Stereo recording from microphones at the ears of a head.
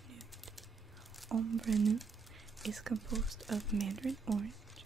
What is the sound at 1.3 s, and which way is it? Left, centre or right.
Speech, right.